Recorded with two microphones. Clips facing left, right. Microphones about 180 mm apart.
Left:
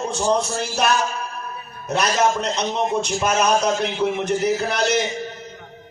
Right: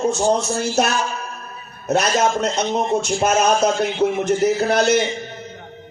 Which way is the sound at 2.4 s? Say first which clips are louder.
Right 2 dB; 45° right (ahead or behind).